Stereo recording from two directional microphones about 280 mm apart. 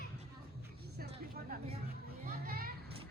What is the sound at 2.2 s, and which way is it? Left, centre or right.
Children playing, right.